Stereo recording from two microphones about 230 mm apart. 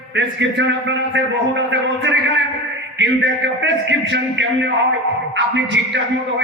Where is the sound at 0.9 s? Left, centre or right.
Right.